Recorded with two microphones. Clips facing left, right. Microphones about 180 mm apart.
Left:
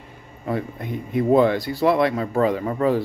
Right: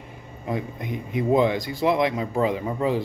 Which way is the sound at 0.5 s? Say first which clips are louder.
Left 2 dB; 15° right (ahead or behind).